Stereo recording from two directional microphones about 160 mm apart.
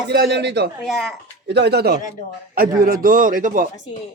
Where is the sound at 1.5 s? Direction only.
90° right.